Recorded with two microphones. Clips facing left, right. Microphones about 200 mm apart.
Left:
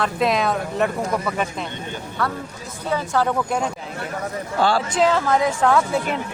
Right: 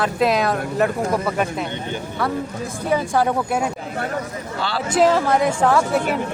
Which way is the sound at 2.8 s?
15° right (ahead or behind).